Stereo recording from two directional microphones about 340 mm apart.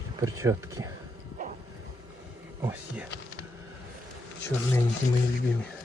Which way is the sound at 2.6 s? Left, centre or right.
Centre.